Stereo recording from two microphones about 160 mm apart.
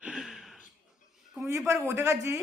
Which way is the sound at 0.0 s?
5° right (ahead or behind).